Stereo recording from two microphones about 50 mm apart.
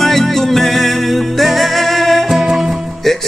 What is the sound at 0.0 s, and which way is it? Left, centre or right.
Music, centre.